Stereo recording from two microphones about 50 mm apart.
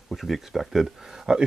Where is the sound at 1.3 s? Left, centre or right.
Centre.